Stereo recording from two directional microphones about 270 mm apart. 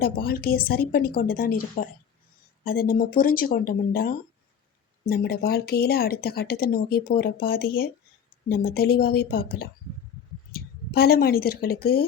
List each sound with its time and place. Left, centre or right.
0.0 s a woman's voice: left